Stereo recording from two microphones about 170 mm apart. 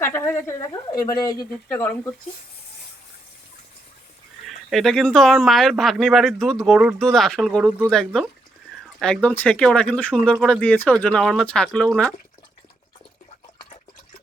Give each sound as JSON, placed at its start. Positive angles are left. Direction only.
{"t": 0.0, "sound": "speech", "side_deg": 15}
{"t": 1.7, "sound": "speech", "side_deg": 10}
{"t": 4.4, "sound": "speech", "side_deg": 0}